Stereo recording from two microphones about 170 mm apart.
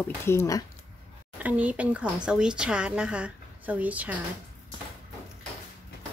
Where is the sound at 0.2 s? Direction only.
15° left (ahead or behind).